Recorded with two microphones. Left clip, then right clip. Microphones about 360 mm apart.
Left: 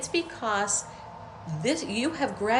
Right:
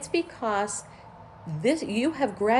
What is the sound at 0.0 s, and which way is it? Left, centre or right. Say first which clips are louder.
Speech: right 1 dB; centre.